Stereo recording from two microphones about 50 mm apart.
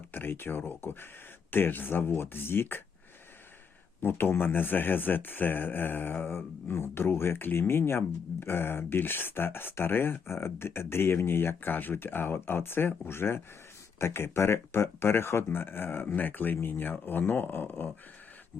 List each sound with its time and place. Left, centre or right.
0.1 s speech: left
4.0 s speech: left